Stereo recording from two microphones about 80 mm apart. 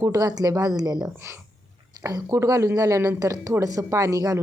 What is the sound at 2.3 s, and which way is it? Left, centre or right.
A woman's voice, right.